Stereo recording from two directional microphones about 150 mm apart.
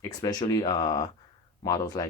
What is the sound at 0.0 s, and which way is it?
Speech, 25° left (ahead or behind).